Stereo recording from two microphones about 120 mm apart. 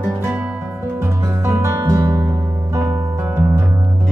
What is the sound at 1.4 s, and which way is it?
Music, 30° right (ahead or behind).